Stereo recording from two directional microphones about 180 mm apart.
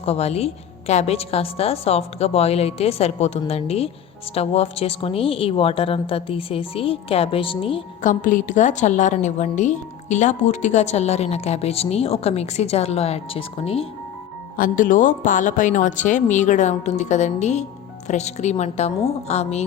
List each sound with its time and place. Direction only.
0.0 s a woman's voice: 35° left (ahead or behind)
8.0 s a woman's voice: 45° left (ahead or behind)
14.5 s a woman's voice: 50° left (ahead or behind)